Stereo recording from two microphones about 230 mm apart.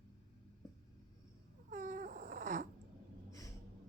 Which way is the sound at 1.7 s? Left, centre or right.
Right.